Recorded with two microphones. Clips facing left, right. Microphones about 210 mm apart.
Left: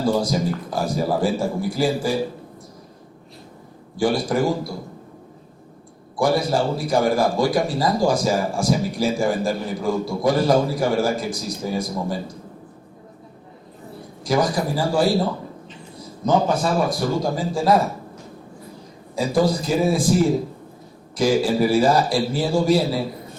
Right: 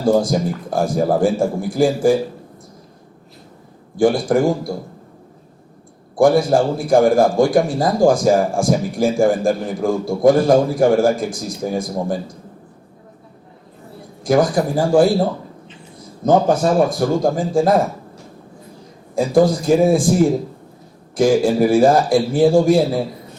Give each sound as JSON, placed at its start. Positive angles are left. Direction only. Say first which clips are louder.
{"t": 0.1, "sound": "a man's voice", "louder": "right 5 dB", "side_deg": -50}
{"t": 3.9, "sound": "a man's voice", "louder": "right 5 dB", "side_deg": -50}
{"t": 6.1, "sound": "a man's voice", "louder": "right 6 dB", "side_deg": -50}
{"t": 14.3, "sound": "a man's voice", "louder": "right 5 dB", "side_deg": -50}
{"t": 19.1, "sound": "a man's voice", "louder": "right 5 dB", "side_deg": -50}
{"t": 21.2, "sound": "a man's voice", "louder": "right 4 dB", "side_deg": -50}